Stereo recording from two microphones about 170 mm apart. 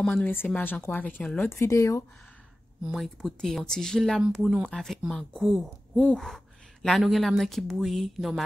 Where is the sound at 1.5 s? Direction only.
15° left (ahead or behind).